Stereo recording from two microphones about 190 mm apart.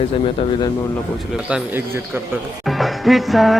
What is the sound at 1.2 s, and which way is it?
Speech, 5° right (ahead or behind).